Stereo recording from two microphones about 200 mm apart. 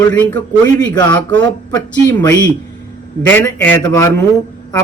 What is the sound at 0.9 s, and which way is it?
Speech, 20° left (ahead or behind).